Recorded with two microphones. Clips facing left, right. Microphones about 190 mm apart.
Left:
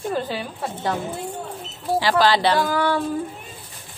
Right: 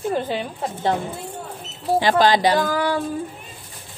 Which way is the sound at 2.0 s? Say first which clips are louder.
Right 2 dB; 20° right (ahead or behind).